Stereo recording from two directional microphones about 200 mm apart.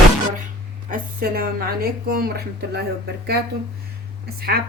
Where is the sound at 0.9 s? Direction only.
45° right (ahead or behind).